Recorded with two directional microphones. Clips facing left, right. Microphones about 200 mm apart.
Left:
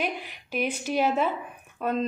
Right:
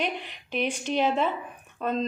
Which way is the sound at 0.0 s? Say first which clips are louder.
Even; 5° left (ahead or behind).